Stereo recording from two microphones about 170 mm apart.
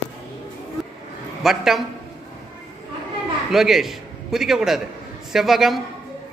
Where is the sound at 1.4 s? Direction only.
Centre (ahead or behind).